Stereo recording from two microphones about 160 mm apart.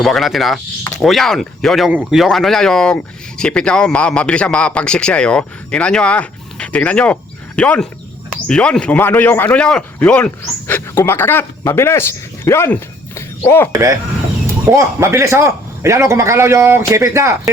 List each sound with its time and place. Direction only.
0.0 s a man's voice: centre (ahead or behind)
13.7 s a man's voice: 20° right (ahead or behind)